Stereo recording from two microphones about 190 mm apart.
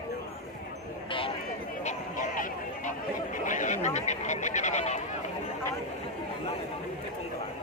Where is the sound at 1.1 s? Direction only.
30° left (ahead or behind).